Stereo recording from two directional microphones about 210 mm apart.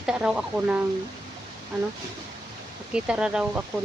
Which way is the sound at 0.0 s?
5° right (ahead or behind).